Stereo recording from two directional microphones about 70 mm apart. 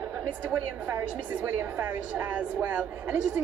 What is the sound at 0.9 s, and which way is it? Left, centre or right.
A woman's voice, right.